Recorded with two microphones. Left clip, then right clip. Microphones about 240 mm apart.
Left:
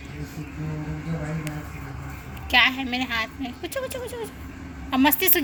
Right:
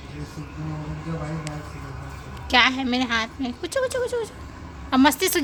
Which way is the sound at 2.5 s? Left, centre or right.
Right.